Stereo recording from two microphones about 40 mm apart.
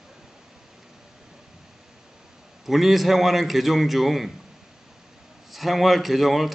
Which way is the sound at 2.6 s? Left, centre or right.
Centre.